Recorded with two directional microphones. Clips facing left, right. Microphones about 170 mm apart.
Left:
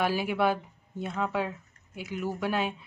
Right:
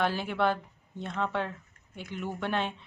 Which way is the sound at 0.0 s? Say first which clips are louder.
Left 2 dB; 10° left (ahead or behind).